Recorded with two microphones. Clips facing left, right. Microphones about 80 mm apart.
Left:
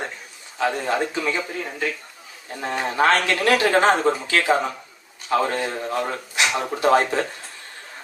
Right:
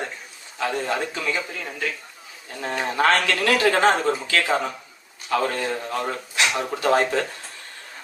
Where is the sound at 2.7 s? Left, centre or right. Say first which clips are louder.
Left 1 dB; left.